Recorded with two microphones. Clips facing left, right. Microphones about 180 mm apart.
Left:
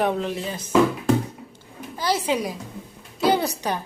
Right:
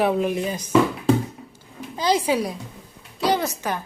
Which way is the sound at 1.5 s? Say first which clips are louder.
Right 2 dB; 15° right (ahead or behind).